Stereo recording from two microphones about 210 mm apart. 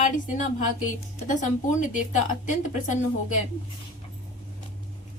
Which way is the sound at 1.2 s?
35° left (ahead or behind).